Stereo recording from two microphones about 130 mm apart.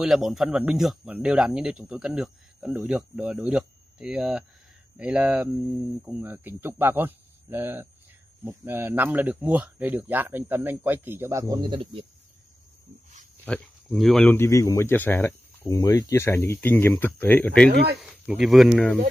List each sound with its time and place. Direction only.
0.0 s speech: centre (ahead or behind); by 12.0 s 40° right (ahead or behind)
13.5 s speech: centre (ahead or behind)
14.3 s speech: 20° left (ahead or behind)
18.0 s speech: 5° right (ahead or behind)